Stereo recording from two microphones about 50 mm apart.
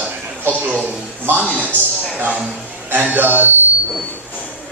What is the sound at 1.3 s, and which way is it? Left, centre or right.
Speech, right.